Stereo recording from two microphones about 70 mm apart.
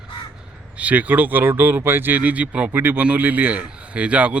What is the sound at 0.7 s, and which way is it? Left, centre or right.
A man's voice, centre.